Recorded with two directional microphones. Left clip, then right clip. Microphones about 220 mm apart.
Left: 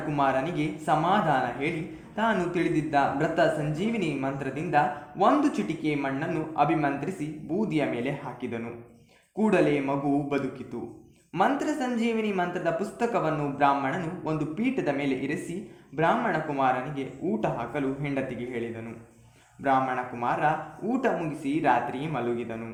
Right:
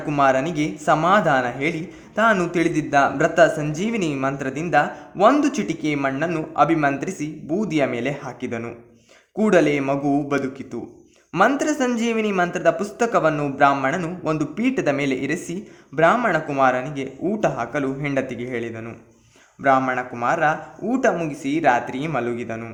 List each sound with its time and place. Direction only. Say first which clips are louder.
0.1 s speech: right 8 dB; 40° right (ahead or behind)